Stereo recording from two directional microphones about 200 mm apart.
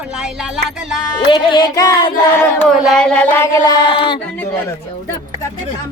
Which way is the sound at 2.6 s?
Centre (ahead or behind).